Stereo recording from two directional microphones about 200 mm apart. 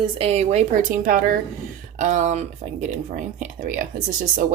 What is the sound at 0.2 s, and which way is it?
A woman's voice, 30° right (ahead or behind).